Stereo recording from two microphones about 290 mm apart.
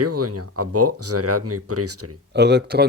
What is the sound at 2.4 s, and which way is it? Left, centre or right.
Speech, right.